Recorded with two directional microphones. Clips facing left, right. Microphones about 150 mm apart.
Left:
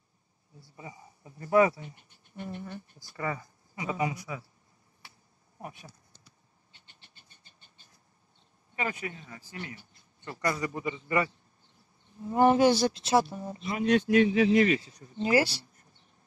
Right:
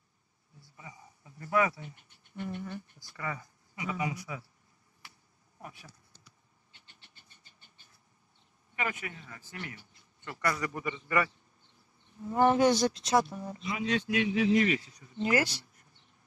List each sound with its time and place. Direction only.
0.7 s speech: 25° left (ahead or behind)
5.6 s speech: 20° left (ahead or behind)
8.7 s a man's voice: 30° left (ahead or behind)
13.7 s speech: 55° left (ahead or behind)
14.5 s speech: 60° left (ahead or behind)
15.1 s speech: 30° left (ahead or behind)